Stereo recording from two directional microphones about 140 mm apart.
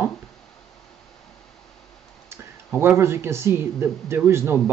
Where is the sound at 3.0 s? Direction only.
20° right (ahead or behind).